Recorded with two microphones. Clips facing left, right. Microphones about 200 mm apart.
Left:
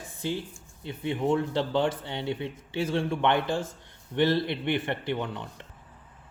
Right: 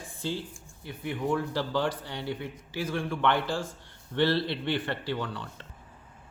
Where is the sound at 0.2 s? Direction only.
20° left (ahead or behind).